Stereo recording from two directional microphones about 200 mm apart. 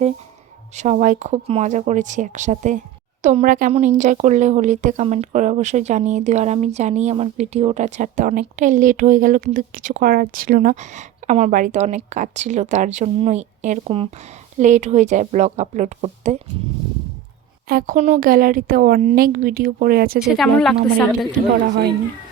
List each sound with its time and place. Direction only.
0.8 s speech: 35° right (ahead or behind)
17.7 s speech: 45° right (ahead or behind)
18.2 s speech: 45° right (ahead or behind)
20.1 s speech: centre (ahead or behind)
21.7 s speech: 55° right (ahead or behind)